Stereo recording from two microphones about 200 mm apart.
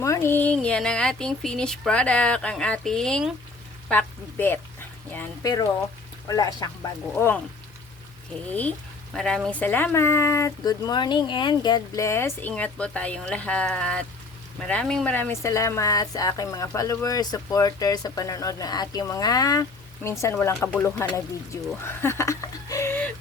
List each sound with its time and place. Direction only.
0.0 s speech: 15° left (ahead or behind)
9.1 s speech: 5° left (ahead or behind)